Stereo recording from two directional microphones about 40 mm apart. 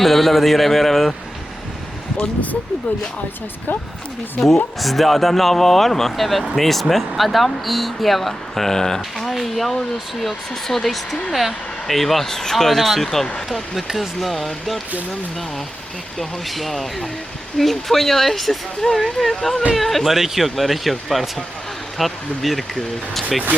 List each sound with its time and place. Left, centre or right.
0.0 s speech: centre
2.1 s speech: left
3.7 s speech: left
4.4 s speech: centre
9.1 s speech: centre
16.1 s speech: centre